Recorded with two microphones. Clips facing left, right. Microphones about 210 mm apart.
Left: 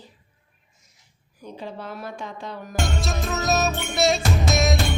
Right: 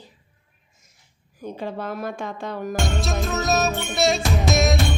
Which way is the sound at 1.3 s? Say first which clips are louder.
Right 5 dB; 50° right (ahead or behind).